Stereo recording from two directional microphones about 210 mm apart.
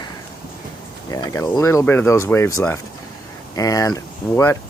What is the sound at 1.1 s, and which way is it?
Speech, 15° left (ahead or behind).